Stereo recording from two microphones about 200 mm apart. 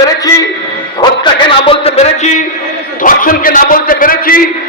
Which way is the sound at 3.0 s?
45° left (ahead or behind).